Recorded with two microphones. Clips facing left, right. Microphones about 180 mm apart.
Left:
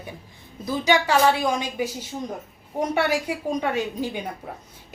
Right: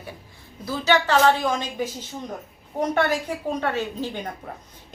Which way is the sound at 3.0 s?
10° left (ahead or behind).